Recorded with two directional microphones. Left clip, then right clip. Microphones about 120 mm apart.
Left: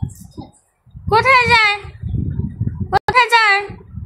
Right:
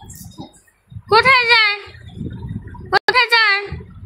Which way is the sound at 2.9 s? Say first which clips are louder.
Left 1 dB; 15° left (ahead or behind).